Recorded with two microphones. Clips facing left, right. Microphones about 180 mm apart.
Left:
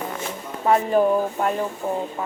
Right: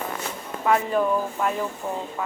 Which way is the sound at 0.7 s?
35° left (ahead or behind).